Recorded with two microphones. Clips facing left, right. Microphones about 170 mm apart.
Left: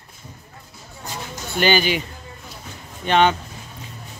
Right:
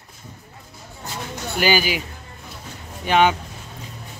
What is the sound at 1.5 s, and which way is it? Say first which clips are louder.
Speech: left 2 dB; 5° right (ahead or behind).